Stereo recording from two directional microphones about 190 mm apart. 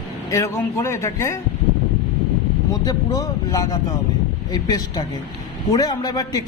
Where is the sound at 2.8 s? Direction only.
20° left (ahead or behind).